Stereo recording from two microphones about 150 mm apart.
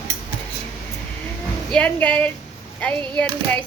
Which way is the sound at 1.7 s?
10° left (ahead or behind).